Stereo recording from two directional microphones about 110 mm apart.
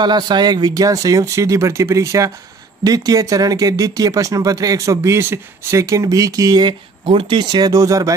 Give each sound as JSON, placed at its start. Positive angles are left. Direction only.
{"t": 0.0, "sound": "speech", "side_deg": -40}
{"t": 7.1, "sound": "speech", "side_deg": -50}